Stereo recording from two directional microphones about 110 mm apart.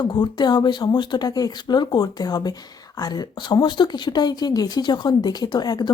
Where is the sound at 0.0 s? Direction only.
40° left (ahead or behind).